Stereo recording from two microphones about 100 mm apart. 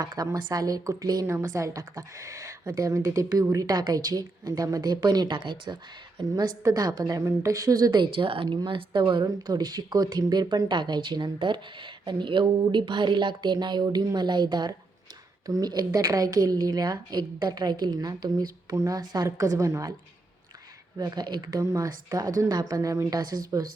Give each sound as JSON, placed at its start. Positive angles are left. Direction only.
{"t": 0.0, "sound": "speech", "side_deg": -40}
{"t": 6.6, "sound": "a woman's voice", "side_deg": -35}
{"t": 21.0, "sound": "speech", "side_deg": -45}